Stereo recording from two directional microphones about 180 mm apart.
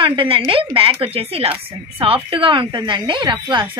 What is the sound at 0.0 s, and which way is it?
A woman's voice, 30° right (ahead or behind).